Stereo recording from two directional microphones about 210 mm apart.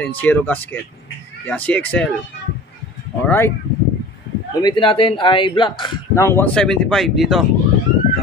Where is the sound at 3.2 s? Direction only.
10° left (ahead or behind).